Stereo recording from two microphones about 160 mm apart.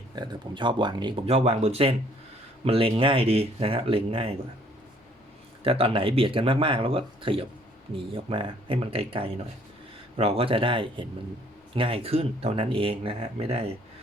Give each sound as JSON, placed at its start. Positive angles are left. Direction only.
{"t": 0.2, "sound": "speech", "side_deg": -30}
{"t": 5.6, "sound": "speech", "side_deg": -35}